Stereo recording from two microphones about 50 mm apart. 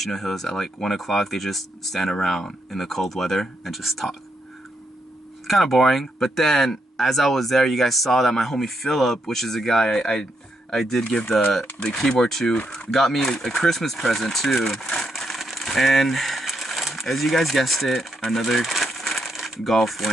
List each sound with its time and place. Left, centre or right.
0.0 s speech: centre
5.5 s speech: centre
11.1 s speech: centre
12.0 s speech: centre
12.5 s speech: left
12.9 s speech: centre